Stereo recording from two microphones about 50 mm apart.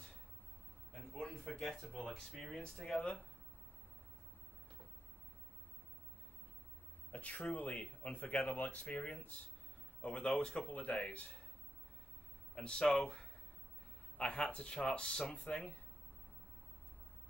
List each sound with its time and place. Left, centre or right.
0.9 s a sound: centre
1.9 s speech: centre
3.0 s speech: left
7.1 s a sound: left
7.4 s speech: left
10.0 s speech: centre
10.7 s speech: left
12.5 s speech: centre